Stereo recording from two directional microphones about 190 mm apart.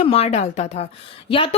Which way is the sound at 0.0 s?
35° left (ahead or behind).